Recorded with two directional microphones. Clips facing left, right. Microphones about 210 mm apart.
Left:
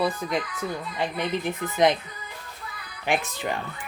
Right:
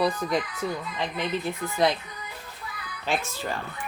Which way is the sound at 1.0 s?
15° left (ahead or behind).